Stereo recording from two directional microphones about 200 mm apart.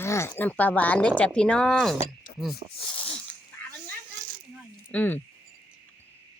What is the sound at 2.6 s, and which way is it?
Speech, 35° right (ahead or behind).